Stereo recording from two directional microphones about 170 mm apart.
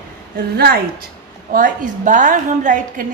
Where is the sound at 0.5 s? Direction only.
70° right (ahead or behind).